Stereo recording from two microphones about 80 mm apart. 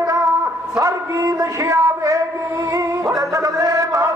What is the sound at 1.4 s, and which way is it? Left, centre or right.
Speech, right.